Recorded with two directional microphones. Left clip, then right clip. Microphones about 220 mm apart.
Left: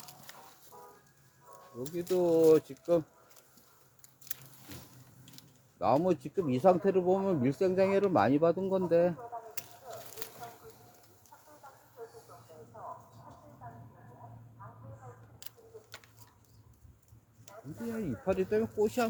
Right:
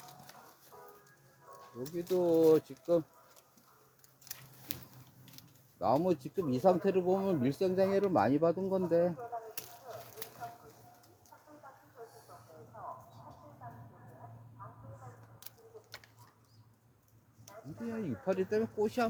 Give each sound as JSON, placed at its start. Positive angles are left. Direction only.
{"t": 0.3, "sound": "music", "side_deg": 20}
{"t": 0.7, "sound": "music", "side_deg": -35}
{"t": 1.8, "sound": "speech", "side_deg": 20}
{"t": 5.8, "sound": "speech", "side_deg": 20}
{"t": 10.2, "sound": "a sound", "side_deg": 10}
{"t": 12.3, "sound": "a sound", "side_deg": -40}
{"t": 12.7, "sound": "mouse", "side_deg": -40}
{"t": 14.6, "sound": "a sound", "side_deg": -35}
{"t": 15.4, "sound": "pigeon", "side_deg": 20}
{"t": 17.9, "sound": "speech", "side_deg": 25}